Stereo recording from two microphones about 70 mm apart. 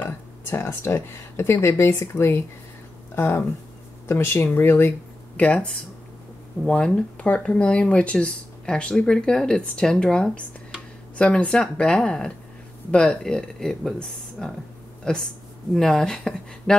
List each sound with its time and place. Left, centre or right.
0.5 s speech: left
5.4 s speech: centre